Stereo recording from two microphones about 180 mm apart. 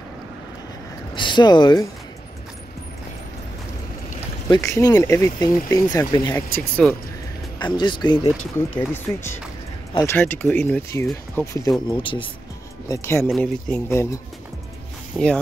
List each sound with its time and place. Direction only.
1.1 s speech: 25° left (ahead or behind)
4.5 s speech: 15° left (ahead or behind)
6.8 s speech: 5° left (ahead or behind)
7.5 s speech: 25° left (ahead or behind)
8.5 s speech: 10° left (ahead or behind)
11.9 s speech: 30° left (ahead or behind)
12.8 s speech: 15° left (ahead or behind)
15.2 s speech: 5° left (ahead or behind)